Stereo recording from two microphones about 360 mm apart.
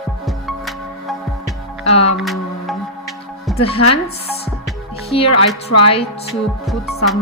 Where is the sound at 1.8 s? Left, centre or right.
Centre.